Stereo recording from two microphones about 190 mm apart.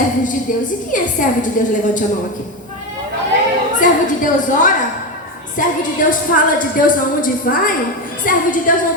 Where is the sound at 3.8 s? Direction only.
40° left (ahead or behind).